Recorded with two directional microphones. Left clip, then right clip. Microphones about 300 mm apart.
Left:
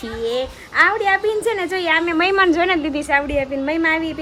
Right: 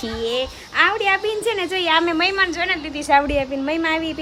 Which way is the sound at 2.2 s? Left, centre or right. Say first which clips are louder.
Left 4 dB; centre.